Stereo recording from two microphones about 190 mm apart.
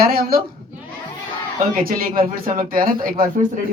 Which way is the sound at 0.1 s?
50° right (ahead or behind).